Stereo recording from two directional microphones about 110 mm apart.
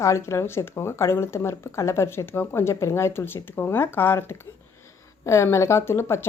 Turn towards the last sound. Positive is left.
turn(degrees=25)  # may be behind; listen again after turning